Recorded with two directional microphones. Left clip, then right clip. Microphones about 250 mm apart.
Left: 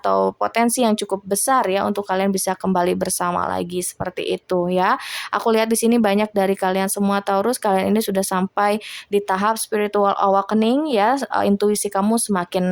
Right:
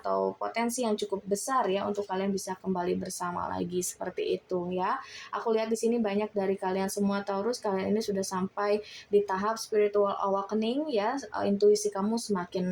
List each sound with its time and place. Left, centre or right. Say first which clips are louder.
0.0 s speech: left 11 dB; left